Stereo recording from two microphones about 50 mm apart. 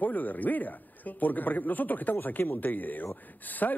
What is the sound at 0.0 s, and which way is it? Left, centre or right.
Speech, left.